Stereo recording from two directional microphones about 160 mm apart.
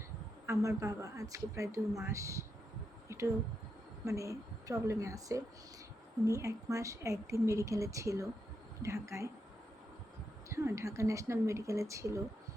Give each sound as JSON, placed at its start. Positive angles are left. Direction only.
{"t": 0.4, "sound": "a woman's voice", "side_deg": -20}
{"t": 10.5, "sound": "a woman's voice", "side_deg": -20}